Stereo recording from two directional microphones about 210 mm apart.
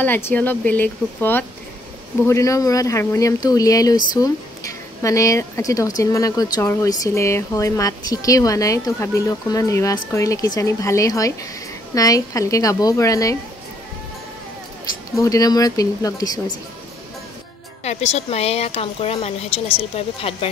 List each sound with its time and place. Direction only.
0.0 s speech: 10° left (ahead or behind)
15.1 s speech: 15° left (ahead or behind)
17.8 s a woman's voice: 30° left (ahead or behind)